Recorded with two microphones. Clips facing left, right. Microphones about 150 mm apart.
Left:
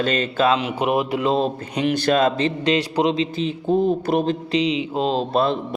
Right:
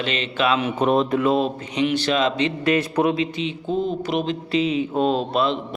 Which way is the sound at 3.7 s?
50° left (ahead or behind).